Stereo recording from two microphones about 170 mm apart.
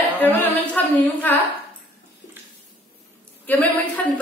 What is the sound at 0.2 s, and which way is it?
Speech, 10° left (ahead or behind).